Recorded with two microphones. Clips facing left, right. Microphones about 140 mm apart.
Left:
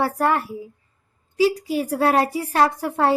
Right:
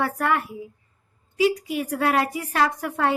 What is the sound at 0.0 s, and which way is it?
A woman's voice, 35° left (ahead or behind).